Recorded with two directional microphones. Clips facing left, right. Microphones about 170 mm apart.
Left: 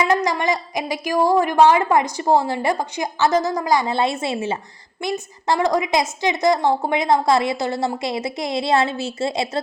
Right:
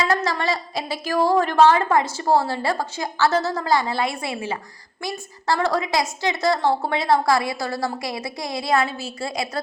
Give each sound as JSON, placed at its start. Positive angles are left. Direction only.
{"t": 0.1, "sound": "a woman's voice", "side_deg": 15}